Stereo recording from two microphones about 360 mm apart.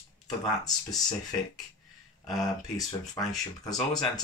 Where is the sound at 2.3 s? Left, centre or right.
Centre.